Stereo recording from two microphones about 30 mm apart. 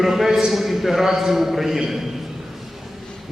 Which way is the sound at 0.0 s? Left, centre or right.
Centre.